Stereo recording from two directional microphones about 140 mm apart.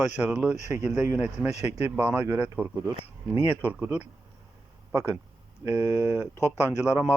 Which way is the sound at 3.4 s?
15° left (ahead or behind).